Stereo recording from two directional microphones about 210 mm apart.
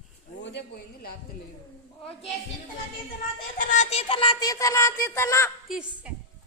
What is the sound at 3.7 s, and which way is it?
Music, 30° left (ahead or behind).